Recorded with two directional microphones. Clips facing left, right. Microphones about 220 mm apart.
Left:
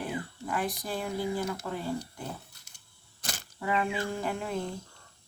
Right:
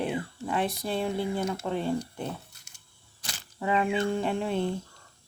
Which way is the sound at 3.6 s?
25° right (ahead or behind).